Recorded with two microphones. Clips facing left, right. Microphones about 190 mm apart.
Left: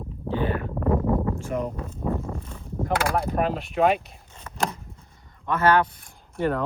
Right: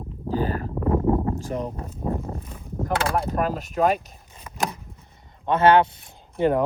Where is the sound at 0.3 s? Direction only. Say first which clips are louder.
Right 1 dB; 40° right (ahead or behind).